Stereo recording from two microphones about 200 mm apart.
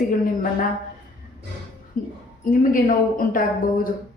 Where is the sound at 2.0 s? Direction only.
40° left (ahead or behind).